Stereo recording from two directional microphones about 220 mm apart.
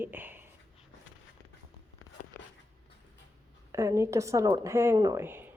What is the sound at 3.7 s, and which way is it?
Speech, 10° right (ahead or behind).